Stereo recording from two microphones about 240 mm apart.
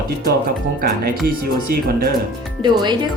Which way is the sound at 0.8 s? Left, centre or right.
Right.